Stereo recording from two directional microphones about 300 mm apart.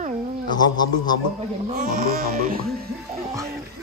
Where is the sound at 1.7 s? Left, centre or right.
Right.